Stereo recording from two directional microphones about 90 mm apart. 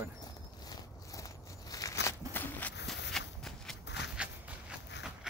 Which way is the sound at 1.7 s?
35° left (ahead or behind).